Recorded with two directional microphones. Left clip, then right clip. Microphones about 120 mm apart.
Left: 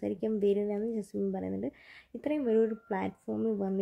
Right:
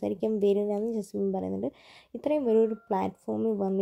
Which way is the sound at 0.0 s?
20° right (ahead or behind).